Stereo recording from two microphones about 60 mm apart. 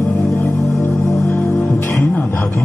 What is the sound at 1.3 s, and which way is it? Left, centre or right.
Music, left.